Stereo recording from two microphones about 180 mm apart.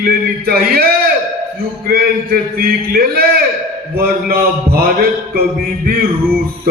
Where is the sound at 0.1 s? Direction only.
60° right (ahead or behind).